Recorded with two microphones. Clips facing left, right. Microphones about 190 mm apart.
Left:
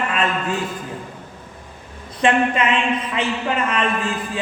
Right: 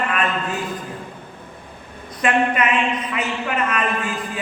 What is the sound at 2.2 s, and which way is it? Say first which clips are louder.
A man's voice: left 1 dB; 30° left (ahead or behind).